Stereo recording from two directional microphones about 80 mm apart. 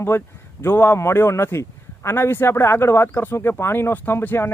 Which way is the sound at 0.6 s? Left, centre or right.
Left.